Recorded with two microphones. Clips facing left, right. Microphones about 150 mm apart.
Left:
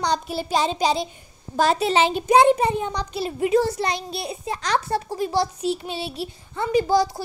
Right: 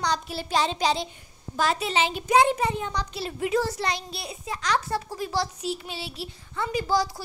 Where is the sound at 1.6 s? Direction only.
35° left (ahead or behind).